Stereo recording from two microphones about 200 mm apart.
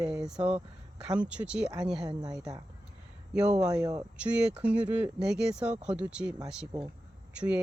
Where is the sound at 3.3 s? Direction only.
5° right (ahead or behind).